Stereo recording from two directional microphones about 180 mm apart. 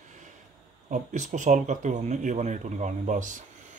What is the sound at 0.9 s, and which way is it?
Speech, 40° right (ahead or behind).